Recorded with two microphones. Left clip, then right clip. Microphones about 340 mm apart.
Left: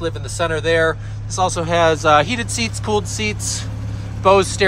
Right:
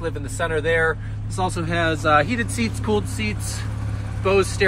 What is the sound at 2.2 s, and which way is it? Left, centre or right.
Speech, centre.